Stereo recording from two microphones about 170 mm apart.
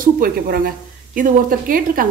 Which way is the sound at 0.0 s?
55° right (ahead or behind).